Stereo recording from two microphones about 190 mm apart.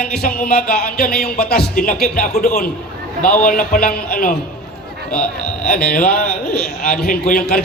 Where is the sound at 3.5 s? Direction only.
50° left (ahead or behind).